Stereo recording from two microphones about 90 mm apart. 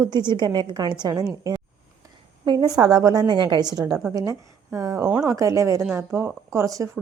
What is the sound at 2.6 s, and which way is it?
A woman's voice, 45° right (ahead or behind).